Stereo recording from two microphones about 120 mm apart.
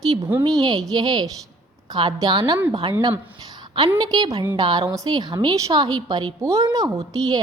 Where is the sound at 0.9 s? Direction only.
35° right (ahead or behind).